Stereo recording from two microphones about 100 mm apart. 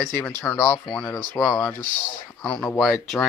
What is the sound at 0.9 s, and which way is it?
Speech, 10° left (ahead or behind).